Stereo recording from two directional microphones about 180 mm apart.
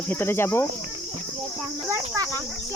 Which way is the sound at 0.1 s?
10° left (ahead or behind).